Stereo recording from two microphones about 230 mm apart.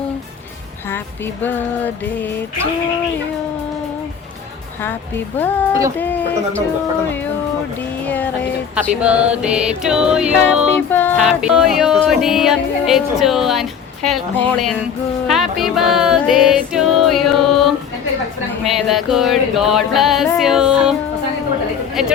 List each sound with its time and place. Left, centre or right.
0.9 s music: centre
4.8 s music: centre
8.0 s music: centre
8.7 s speech: centre
10.9 s music: centre
12.0 s speech: centre
15.3 s music: centre
18.6 s speech: centre
22.0 s speech: centre